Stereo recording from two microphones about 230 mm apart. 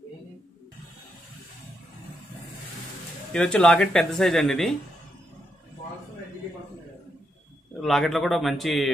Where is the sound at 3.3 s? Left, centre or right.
Centre.